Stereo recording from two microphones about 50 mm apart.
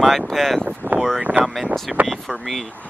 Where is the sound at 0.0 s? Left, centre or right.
Centre.